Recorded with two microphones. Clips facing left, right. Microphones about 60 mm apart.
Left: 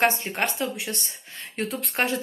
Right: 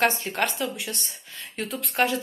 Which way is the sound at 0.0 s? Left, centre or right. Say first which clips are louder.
Even; left.